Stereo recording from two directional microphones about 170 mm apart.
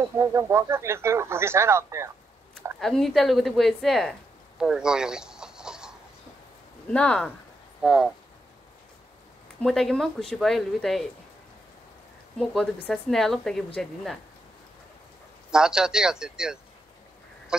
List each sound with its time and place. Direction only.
0.2 s speech: 15° right (ahead or behind)
2.8 s speech: centre (ahead or behind)
4.6 s chicken: 5° right (ahead or behind)
6.9 s speech: 5° left (ahead or behind)
9.6 s speech: 5° left (ahead or behind)
12.4 s speech: 5° left (ahead or behind)
15.5 s speech: 5° right (ahead or behind)